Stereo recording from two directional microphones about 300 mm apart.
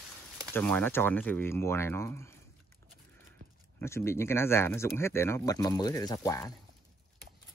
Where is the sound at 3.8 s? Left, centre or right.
Centre.